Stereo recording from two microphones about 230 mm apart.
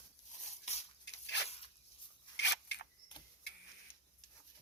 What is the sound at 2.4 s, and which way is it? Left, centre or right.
Scissors, left.